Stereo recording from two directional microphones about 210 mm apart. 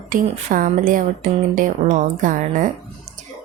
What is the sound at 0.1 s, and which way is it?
A woman's voice, 40° right (ahead or behind).